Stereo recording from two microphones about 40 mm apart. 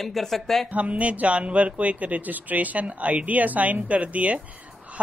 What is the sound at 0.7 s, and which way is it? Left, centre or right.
Speech, right.